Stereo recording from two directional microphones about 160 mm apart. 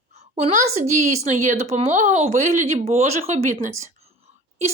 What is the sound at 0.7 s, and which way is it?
Speech, 45° right (ahead or behind).